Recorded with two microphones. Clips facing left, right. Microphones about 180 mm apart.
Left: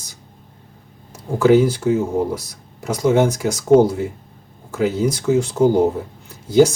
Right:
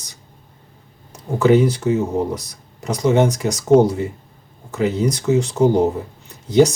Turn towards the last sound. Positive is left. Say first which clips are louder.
# left 1 dB
turn(degrees=5)  # may be behind; listen again after turning